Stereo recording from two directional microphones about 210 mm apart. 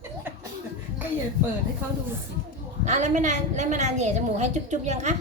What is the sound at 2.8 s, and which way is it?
A woman's voice, 35° right (ahead or behind).